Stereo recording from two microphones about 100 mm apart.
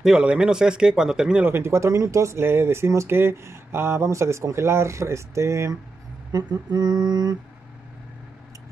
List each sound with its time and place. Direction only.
0.0 s speech: 10° right (ahead or behind)
1.4 s speech: 25° right (ahead or behind)
6.3 s mantra: 40° right (ahead or behind)